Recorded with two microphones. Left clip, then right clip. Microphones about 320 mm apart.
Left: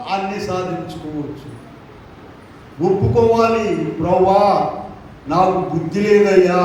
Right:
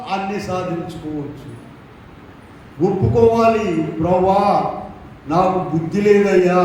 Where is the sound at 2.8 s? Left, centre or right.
Left.